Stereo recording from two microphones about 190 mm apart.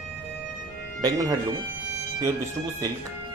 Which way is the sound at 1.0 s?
20° right (ahead or behind).